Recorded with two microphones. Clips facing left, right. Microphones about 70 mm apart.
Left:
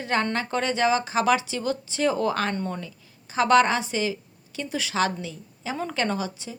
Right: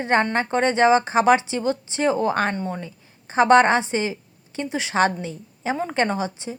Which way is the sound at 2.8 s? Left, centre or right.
Right.